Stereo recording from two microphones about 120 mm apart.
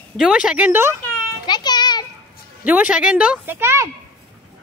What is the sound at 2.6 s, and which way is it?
A woman's voice, 15° right (ahead or behind).